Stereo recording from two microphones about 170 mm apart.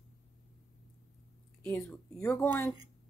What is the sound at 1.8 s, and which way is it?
Speech, 10° left (ahead or behind).